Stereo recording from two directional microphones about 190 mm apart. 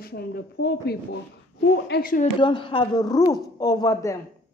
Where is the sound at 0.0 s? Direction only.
55° left (ahead or behind).